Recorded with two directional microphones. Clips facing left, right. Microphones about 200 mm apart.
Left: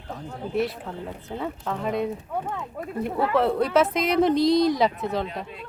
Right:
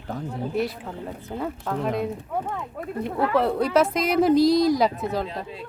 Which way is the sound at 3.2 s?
Centre (ahead or behind).